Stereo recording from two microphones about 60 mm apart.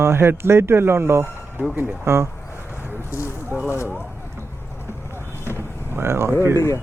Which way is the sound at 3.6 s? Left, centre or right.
Left.